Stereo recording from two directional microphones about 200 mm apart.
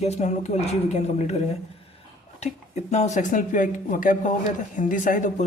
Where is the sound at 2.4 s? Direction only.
35° left (ahead or behind).